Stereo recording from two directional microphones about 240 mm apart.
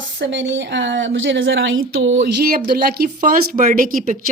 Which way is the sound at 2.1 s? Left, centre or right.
Right.